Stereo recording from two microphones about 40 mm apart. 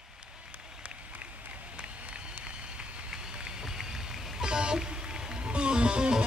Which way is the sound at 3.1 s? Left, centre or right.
Centre.